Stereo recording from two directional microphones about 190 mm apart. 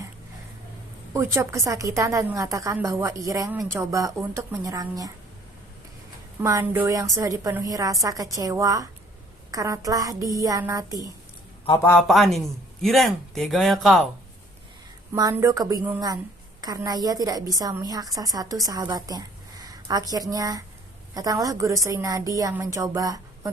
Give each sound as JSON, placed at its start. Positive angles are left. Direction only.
{"t": 1.1, "sound": "a woman's voice", "side_deg": -15}
{"t": 6.4, "sound": "a woman's voice", "side_deg": -15}
{"t": 11.8, "sound": "speech", "side_deg": 15}
{"t": 12.0, "sound": "speech", "side_deg": 0}
{"t": 15.1, "sound": "a woman's voice", "side_deg": -15}